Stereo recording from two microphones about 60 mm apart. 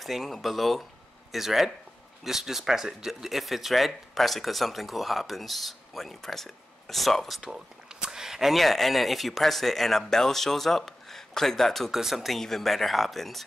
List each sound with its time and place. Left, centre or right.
0.0 s speech: centre
7.4 s speech: centre